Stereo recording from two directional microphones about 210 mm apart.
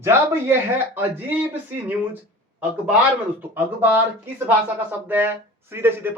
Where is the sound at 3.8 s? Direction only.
10° right (ahead or behind).